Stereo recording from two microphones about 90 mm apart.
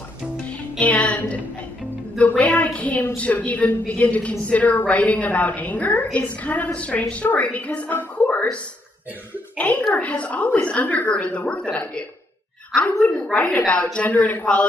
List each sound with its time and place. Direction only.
0.5 s music: 15° left (ahead or behind)
2.1 s a woman's voice: 15° left (ahead or behind)
9.6 s a woman's voice: 15° left (ahead or behind)